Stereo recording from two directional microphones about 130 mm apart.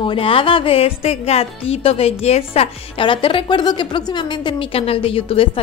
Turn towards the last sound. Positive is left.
turn(degrees=45)  # may be behind; listen again after turning